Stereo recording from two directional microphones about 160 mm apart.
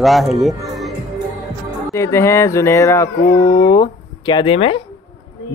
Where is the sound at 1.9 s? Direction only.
15° left (ahead or behind).